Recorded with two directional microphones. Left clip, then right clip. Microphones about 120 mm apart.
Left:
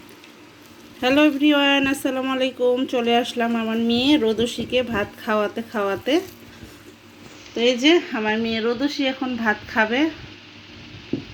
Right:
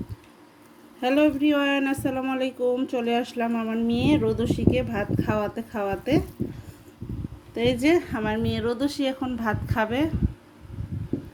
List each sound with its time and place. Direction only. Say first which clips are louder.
1.0 s speech: left 4 dB; 15° right (ahead or behind)
7.5 s speech: left 5 dB; 20° right (ahead or behind)